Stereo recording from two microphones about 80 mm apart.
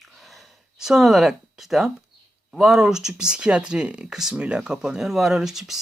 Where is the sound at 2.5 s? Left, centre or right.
Centre.